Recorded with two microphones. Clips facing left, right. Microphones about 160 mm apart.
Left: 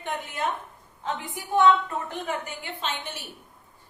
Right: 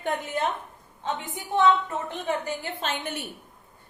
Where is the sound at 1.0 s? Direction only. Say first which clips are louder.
Right 1 dB; 25° right (ahead or behind).